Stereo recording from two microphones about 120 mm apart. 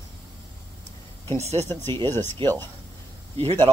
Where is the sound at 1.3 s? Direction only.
65° right (ahead or behind).